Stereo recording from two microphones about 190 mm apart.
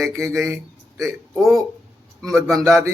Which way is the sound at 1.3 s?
Centre (ahead or behind).